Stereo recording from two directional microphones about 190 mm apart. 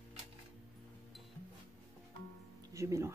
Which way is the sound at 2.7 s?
15° right (ahead or behind).